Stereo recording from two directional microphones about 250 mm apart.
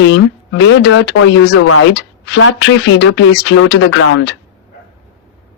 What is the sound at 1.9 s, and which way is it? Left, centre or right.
A woman's voice, left.